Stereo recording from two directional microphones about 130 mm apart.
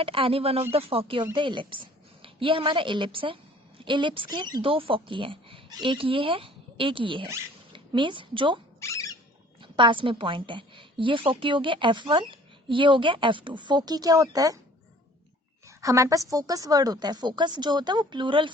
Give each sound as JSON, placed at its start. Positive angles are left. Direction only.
{"t": 0.0, "sound": "a woman's voice", "side_deg": -45}
{"t": 8.8, "sound": "a sound", "side_deg": 25}
{"t": 9.6, "sound": "a woman's voice", "side_deg": -40}
{"t": 15.6, "sound": "a woman's voice", "side_deg": -25}